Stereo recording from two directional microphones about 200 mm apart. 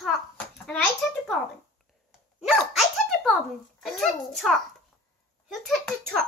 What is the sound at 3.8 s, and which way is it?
Speech, centre (ahead or behind).